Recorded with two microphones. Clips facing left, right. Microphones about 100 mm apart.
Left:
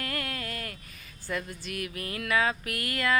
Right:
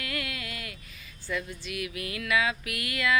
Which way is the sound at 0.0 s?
40° left (ahead or behind).